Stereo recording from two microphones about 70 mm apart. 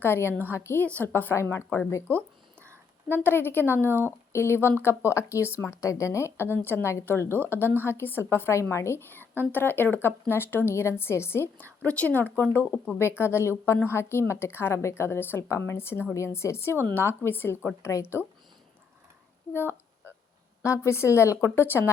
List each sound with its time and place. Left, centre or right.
0.0 s speech: left
2.1 s speech: right
3.1 s speech: left
3.8 s speech: right
4.3 s speech: left
11.8 s speech: left
20.7 s speech: left